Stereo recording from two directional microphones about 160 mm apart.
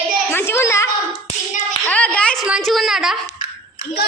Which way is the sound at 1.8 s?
10° left (ahead or behind).